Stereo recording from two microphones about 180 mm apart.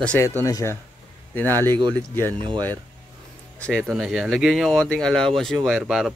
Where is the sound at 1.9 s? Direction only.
10° left (ahead or behind).